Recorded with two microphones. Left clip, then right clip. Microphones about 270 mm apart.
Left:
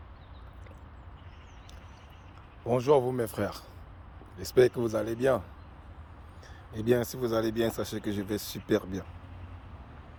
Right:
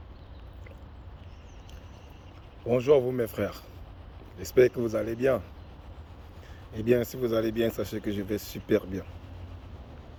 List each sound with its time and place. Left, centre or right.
2.6 s speech: left
6.8 s speech: centre